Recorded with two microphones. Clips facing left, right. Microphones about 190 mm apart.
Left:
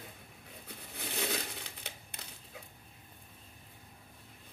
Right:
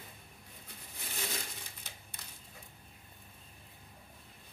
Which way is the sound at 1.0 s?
65° left (ahead or behind).